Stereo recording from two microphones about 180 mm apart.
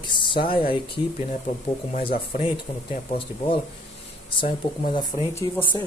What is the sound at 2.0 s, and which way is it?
Speech, 30° left (ahead or behind).